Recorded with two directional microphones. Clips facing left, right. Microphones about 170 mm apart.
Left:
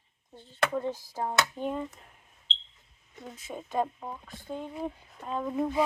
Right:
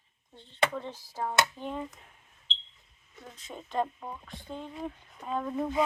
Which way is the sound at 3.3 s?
5° left (ahead or behind).